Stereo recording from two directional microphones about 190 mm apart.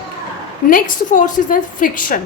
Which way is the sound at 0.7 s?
45° left (ahead or behind).